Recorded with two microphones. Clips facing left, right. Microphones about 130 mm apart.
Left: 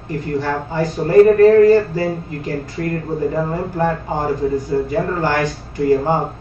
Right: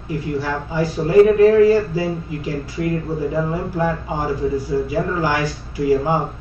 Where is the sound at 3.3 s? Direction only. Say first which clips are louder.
Left 1 dB; 45° left (ahead or behind).